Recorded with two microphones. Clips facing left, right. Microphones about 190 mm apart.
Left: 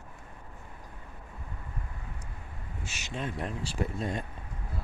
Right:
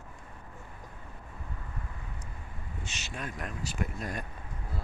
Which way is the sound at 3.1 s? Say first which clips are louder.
Left 5 dB; 25° left (ahead or behind).